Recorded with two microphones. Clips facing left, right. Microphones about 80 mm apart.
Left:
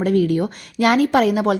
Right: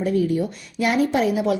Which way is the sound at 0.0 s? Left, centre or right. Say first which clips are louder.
Left 3 dB; left.